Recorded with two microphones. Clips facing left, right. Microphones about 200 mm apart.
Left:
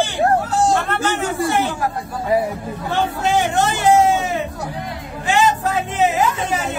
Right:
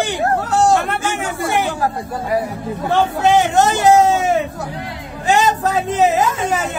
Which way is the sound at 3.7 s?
45° right (ahead or behind).